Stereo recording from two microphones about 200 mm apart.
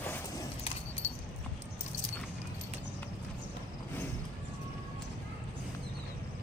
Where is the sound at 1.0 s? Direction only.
30° left (ahead or behind).